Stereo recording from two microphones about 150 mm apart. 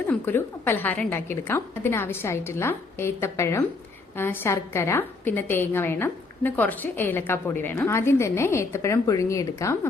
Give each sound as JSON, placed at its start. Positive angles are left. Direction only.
{"t": 0.1, "sound": "a woman's voice", "side_deg": 15}